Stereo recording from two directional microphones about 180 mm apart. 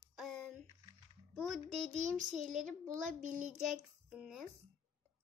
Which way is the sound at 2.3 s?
45° right (ahead or behind).